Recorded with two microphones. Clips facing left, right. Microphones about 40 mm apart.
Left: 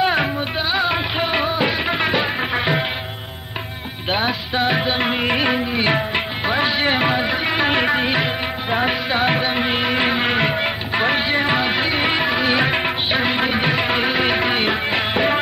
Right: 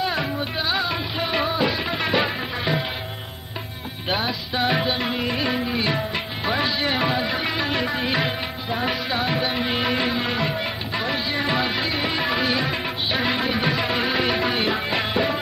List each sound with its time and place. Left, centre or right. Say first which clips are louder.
0.0 s music: left 6 dB; left
0.6 s music: left 5 dB; left
4.1 s music: left 4 dB; left
4.9 s music: left 5 dB; left
7.6 s music: left 6 dB; left
11.4 s music: left 4 dB; left
12.2 s music: left 4 dB; left
12.5 s music of bollywood: left 6 dB; left
13.4 s music: left 4 dB; left